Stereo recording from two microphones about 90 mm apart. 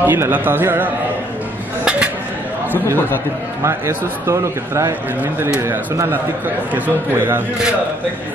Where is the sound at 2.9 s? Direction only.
20° left (ahead or behind).